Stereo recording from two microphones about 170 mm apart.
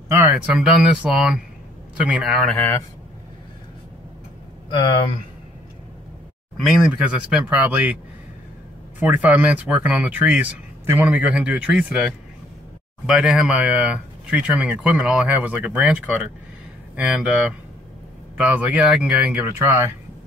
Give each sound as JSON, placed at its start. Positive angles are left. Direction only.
{"t": 0.6, "sound": "speech", "side_deg": -5}
{"t": 4.6, "sound": "speech", "side_deg": 30}
{"t": 6.5, "sound": "speech", "side_deg": 0}
{"t": 9.0, "sound": "speech", "side_deg": -10}